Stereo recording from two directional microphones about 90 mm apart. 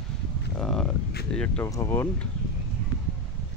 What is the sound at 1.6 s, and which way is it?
Speech, 30° left (ahead or behind).